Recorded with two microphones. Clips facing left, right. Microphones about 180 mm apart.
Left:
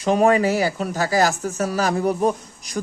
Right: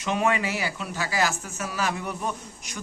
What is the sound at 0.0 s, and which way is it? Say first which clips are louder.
Speech: left 8 dB; 40° left (ahead or behind).